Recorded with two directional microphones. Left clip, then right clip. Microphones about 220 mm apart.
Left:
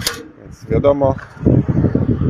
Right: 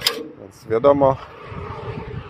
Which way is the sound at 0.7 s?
5° left (ahead or behind).